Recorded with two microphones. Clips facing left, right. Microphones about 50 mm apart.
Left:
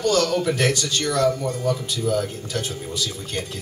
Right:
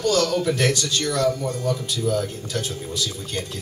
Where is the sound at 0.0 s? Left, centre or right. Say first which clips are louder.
Even; centre.